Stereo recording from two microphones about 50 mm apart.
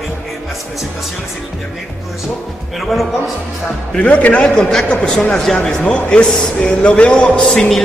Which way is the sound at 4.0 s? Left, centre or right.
Left.